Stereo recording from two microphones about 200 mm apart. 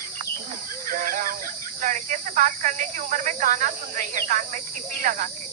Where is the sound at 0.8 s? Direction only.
45° right (ahead or behind).